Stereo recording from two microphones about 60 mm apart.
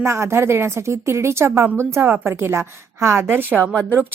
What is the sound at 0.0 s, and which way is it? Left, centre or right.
Speech, right.